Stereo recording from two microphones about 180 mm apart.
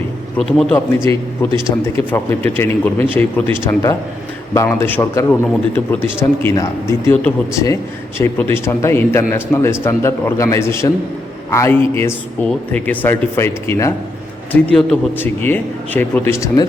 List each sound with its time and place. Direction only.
0.3 s a man's voice: 5° left (ahead or behind)
0.9 s a man's voice: 15° left (ahead or behind)